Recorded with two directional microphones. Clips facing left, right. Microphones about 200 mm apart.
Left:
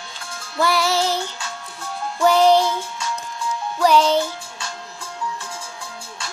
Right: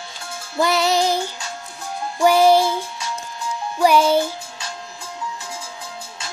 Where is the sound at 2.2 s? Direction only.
10° right (ahead or behind).